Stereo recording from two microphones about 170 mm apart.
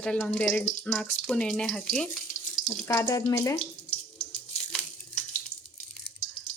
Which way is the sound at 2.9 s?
20° left (ahead or behind).